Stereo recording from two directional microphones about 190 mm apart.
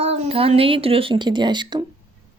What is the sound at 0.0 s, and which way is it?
Speech, 30° right (ahead or behind).